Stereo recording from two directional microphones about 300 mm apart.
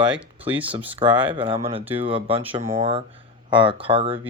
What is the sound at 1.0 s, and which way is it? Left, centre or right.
Speech, centre.